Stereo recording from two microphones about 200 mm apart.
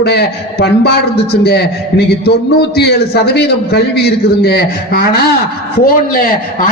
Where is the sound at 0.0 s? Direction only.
55° left (ahead or behind).